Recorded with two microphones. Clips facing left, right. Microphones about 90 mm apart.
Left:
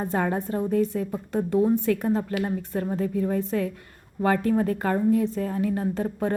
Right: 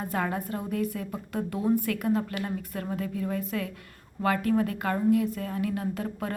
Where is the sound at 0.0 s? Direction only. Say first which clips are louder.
Left 4 dB; 30° left (ahead or behind).